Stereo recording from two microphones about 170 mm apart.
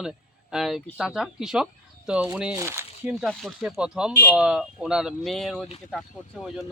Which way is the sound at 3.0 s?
Centre (ahead or behind).